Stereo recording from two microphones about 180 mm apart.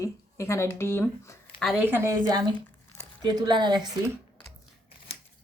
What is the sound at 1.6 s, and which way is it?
Speech, centre (ahead or behind).